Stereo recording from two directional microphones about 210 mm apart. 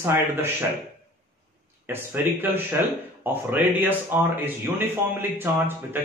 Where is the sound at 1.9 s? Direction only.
10° right (ahead or behind).